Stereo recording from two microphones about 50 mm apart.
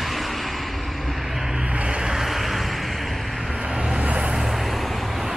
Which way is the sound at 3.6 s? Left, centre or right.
Centre.